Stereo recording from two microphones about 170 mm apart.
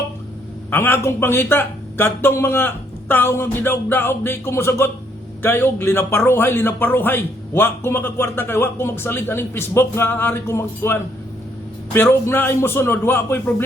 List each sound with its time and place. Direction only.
0.7 s a man's voice: 15° left (ahead or behind)
11.9 s a man's voice: 15° left (ahead or behind)